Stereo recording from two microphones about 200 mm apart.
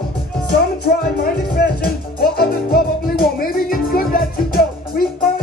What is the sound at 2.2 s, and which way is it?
Music, 50° left (ahead or behind).